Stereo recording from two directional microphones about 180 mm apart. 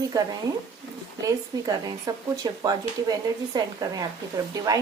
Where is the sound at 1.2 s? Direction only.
20° right (ahead or behind).